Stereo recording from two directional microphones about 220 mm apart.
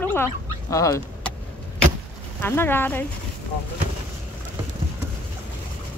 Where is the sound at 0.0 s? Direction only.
10° left (ahead or behind).